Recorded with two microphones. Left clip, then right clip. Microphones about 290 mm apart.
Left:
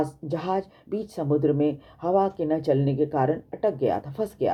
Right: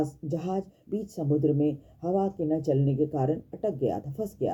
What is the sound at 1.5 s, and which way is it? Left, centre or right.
Speech, left.